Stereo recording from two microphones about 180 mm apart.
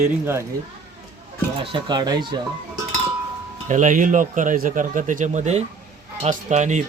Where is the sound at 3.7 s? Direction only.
45° right (ahead or behind).